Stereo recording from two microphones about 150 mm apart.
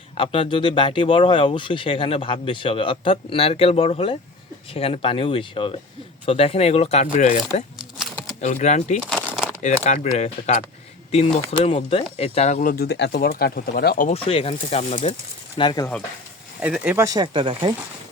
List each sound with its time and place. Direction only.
0.2 s speech: 35° left (ahead or behind); by 7.6 s 55° left (ahead or behind)
7.9 s shuffling cards: centre (ahead or behind)
8.4 s speech: 50° left (ahead or behind)
9.0 s a sound: 5° left (ahead or behind)
9.6 s speech: 50° left (ahead or behind)
12.8 s speech: 90° left
14.1 s speech: 40° left (ahead or behind)
15.5 s speech: 30° left (ahead or behind)
16.6 s speech: 10° right (ahead or behind)
17.3 s speech: 35° right (ahead or behind)